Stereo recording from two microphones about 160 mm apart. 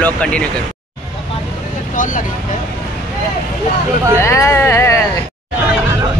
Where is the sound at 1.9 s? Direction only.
55° left (ahead or behind).